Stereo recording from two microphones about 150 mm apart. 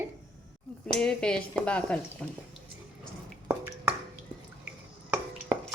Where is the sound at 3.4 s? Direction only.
15° right (ahead or behind).